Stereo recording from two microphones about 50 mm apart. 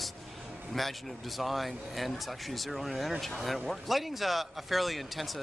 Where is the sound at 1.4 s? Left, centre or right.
Centre.